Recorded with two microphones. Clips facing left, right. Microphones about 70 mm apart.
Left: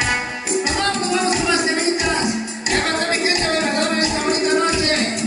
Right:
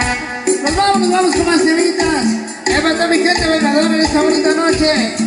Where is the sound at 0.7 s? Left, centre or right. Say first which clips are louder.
Right 9 dB; right.